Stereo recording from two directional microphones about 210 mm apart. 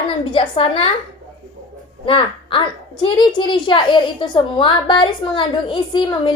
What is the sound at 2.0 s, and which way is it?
Speech, 25° left (ahead or behind).